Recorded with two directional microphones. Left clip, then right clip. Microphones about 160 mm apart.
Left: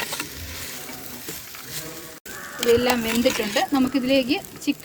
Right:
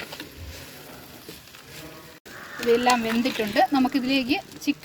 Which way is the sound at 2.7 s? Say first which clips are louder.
Left 1 dB; 25° right (ahead or behind).